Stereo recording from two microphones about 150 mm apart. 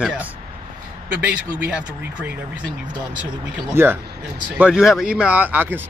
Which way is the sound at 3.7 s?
15° right (ahead or behind).